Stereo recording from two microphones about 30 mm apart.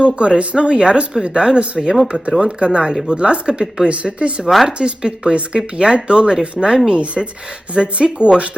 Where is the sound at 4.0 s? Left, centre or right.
Right.